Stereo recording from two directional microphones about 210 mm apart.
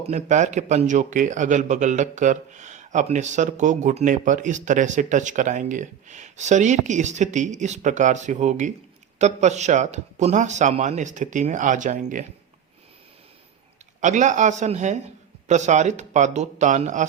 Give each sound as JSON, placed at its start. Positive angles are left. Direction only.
{"t": 0.1, "sound": "a man's voice", "side_deg": -35}
{"t": 14.0, "sound": "a man's voice", "side_deg": -35}